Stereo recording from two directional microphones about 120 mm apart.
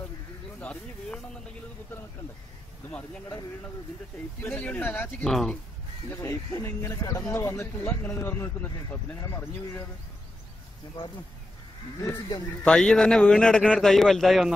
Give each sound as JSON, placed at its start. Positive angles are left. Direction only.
{"t": 0.6, "sound": "speech", "side_deg": 10}
{"t": 4.4, "sound": "speech", "side_deg": 15}
{"t": 5.2, "sound": "a man's voice", "side_deg": 5}
{"t": 6.0, "sound": "speech", "side_deg": 25}
{"t": 12.6, "sound": "a man's voice", "side_deg": 5}